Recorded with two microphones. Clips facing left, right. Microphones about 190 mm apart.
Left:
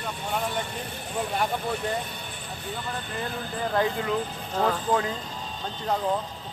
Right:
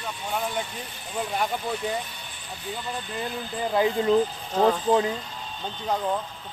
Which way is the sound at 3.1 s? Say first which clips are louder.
Right 1 dB; 15° right (ahead or behind).